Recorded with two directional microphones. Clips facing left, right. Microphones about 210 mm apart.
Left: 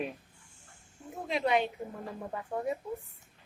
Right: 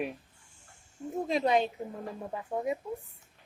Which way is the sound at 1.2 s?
40° right (ahead or behind).